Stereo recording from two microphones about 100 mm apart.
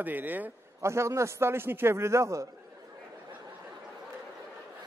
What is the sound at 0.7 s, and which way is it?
A man's voice, 30° right (ahead or behind).